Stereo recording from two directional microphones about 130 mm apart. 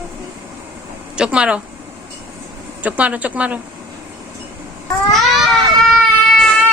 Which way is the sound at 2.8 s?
10° right (ahead or behind).